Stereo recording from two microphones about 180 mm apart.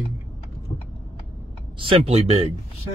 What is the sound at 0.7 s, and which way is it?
Vehicle, 30° left (ahead or behind).